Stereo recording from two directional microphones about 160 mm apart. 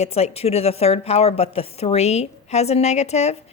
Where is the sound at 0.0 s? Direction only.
40° left (ahead or behind).